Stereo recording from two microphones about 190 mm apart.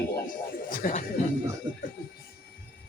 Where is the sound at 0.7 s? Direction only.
45° left (ahead or behind).